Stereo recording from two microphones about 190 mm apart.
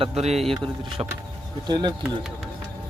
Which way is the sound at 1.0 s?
15° right (ahead or behind).